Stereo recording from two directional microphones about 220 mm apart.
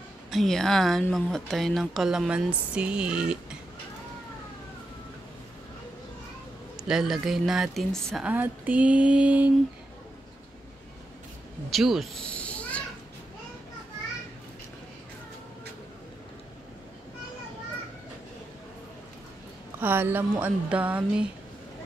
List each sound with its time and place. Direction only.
0.3 s a woman's voice: centre (ahead or behind)
6.8 s a woman's voice: centre (ahead or behind)
11.7 s a sound: centre (ahead or behind)
19.8 s a woman's voice: 10° right (ahead or behind)